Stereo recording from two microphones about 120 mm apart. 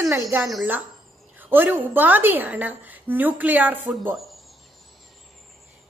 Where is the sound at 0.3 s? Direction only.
15° right (ahead or behind).